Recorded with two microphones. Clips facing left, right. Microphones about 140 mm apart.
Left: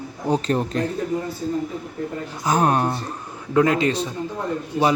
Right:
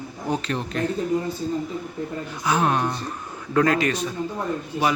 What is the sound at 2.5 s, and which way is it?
Speech, 45° left (ahead or behind).